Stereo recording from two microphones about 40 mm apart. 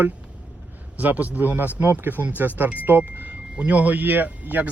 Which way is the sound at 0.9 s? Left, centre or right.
Right.